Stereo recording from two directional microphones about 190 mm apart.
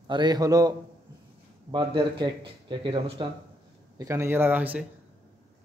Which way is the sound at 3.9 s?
15° right (ahead or behind).